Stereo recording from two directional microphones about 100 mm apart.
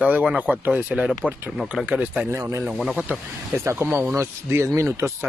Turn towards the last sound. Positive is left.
turn(degrees=-30)  # may be behind; listen again after turning